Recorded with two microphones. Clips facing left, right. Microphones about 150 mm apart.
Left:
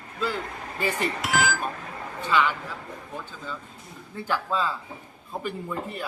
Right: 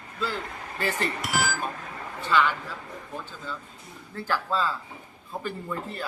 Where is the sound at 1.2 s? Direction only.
90° left.